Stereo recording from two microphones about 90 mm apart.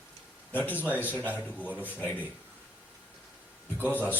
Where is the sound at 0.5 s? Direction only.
20° left (ahead or behind).